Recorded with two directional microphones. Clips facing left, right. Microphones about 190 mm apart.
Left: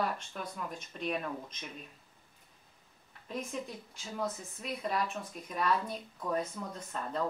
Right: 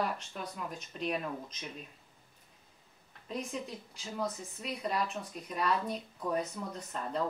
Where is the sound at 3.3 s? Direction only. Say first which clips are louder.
Even; centre (ahead or behind).